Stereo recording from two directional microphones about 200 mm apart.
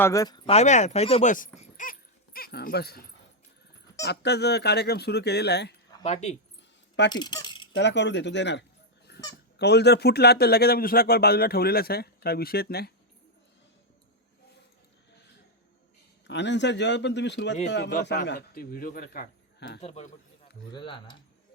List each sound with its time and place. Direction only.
0.0 s speech: 15° left (ahead or behind)
0.5 s speech: 35° left (ahead or behind)
1.5 s dog: 40° left (ahead or behind)
4.0 s speech: 55° left (ahead or behind)
6.0 s speech: 35° left (ahead or behind)
7.1 s keys jangling: 20° left (ahead or behind)
7.8 s speech: 60° left (ahead or behind)
9.1 s goose: 55° left (ahead or behind)
9.6 s a man's voice: 55° left (ahead or behind)
16.2 s speech: 60° left (ahead or behind)
18.3 s a man's voice: 50° left (ahead or behind)
19.8 s speech: 30° left (ahead or behind)